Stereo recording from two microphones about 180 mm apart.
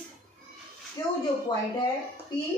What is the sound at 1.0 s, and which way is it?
Speech, 15° left (ahead or behind).